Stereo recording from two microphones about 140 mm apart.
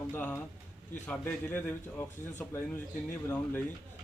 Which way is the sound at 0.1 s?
10° left (ahead or behind).